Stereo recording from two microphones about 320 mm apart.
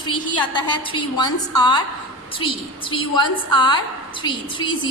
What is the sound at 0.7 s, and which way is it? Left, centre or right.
A woman's voice, centre.